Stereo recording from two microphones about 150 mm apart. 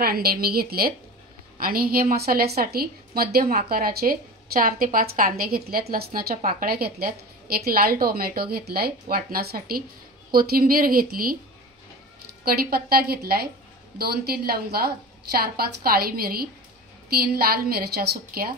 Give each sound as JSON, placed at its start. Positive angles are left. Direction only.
{"t": 0.0, "sound": "a woman's voice", "side_deg": -90}
{"t": 1.6, "sound": "a woman's voice", "side_deg": -80}
{"t": 9.0, "sound": "a woman's voice", "side_deg": -80}
{"t": 12.4, "sound": "a woman's voice", "side_deg": -85}